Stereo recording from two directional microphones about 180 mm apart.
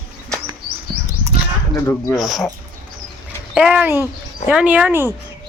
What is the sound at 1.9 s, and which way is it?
Speech, 20° left (ahead or behind).